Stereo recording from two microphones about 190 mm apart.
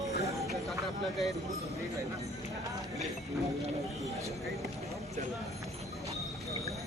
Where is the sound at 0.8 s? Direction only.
Centre (ahead or behind).